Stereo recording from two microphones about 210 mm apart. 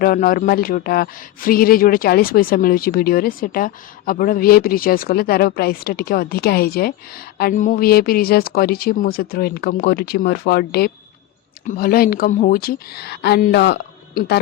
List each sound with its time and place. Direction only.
0.0 s speech: 40° left (ahead or behind)